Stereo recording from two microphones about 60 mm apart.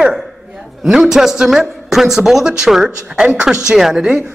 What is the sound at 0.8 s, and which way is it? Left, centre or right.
A man's voice, centre.